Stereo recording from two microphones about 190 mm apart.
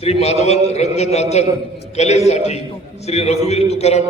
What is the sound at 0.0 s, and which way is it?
A man's voice, 35° left (ahead or behind).